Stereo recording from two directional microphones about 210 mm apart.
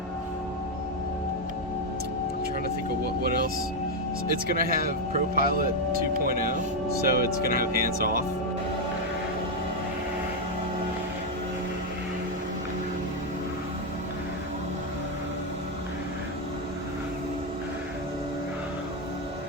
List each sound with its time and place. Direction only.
3.2 s music: 45° right (ahead or behind)
4.5 s speech: 45° right (ahead or behind)